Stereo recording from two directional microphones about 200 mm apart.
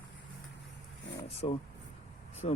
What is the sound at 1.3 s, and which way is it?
Speech, 30° left (ahead or behind).